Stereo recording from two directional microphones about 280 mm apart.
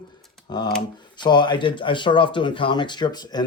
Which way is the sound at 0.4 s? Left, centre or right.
Centre.